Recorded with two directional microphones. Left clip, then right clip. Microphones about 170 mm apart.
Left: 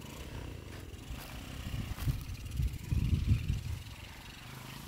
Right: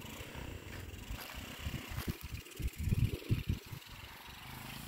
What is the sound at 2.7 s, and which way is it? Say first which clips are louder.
Vehicle: even; 60° right (ahead or behind).